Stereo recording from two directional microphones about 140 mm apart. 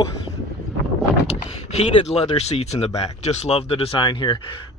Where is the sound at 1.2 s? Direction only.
50° left (ahead or behind).